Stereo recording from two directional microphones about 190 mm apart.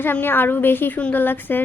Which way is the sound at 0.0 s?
10° left (ahead or behind).